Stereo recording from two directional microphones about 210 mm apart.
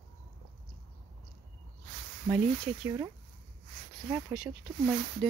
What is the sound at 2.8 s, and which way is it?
Speech, 15° right (ahead or behind).